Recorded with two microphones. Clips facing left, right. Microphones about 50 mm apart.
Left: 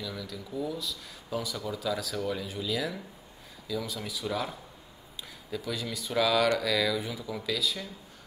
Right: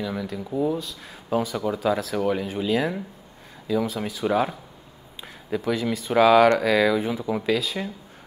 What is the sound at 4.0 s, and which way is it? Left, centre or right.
Speech, right.